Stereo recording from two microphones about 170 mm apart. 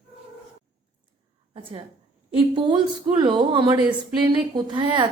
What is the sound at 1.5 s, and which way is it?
A woman's voice, 30° right (ahead or behind).